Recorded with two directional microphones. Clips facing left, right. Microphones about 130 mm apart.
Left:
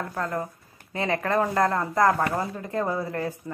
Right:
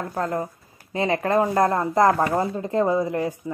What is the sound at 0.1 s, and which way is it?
A woman's voice, 30° right (ahead or behind).